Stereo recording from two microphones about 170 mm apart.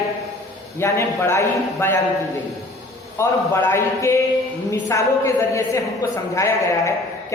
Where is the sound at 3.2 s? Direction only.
15° left (ahead or behind).